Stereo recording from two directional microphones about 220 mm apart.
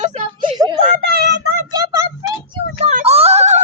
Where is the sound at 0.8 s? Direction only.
45° right (ahead or behind).